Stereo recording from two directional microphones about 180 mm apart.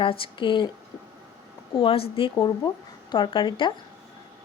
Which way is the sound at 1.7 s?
30° left (ahead or behind).